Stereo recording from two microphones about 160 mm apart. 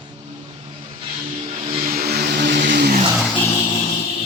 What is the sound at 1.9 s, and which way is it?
Vehicle, 75° right (ahead or behind).